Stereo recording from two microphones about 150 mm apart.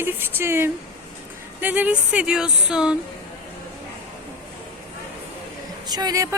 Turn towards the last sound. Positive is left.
turn(degrees=-25)  # may be behind; listen again after turning